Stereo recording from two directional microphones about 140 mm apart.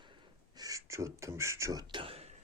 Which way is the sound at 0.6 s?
25° right (ahead or behind).